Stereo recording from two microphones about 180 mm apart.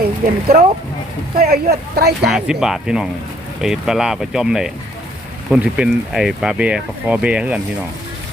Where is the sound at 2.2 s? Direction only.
Centre (ahead or behind).